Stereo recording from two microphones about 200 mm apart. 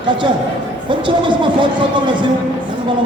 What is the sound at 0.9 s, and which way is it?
Speech, 25° right (ahead or behind).